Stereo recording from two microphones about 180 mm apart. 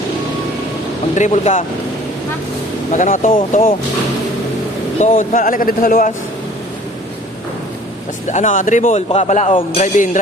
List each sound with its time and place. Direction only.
1.1 s a man's voice: 40° left (ahead or behind)
2.9 s speech: 45° left (ahead or behind)
4.9 s speech: 45° left (ahead or behind)
8.3 s a man's voice: 45° left (ahead or behind)
9.8 s speech: 45° left (ahead or behind)